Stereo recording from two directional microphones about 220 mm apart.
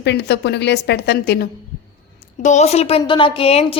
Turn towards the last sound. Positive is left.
turn(degrees=25)  # may be behind; listen again after turning